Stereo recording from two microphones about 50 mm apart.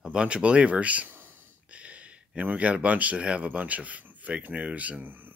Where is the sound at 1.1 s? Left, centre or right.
Right.